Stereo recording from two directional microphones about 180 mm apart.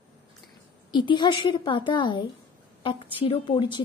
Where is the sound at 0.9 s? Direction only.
25° left (ahead or behind).